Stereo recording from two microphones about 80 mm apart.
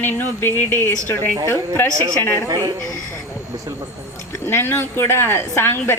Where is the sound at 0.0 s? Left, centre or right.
Left.